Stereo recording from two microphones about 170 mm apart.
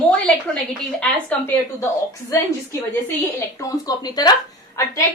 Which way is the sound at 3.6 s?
20° left (ahead or behind).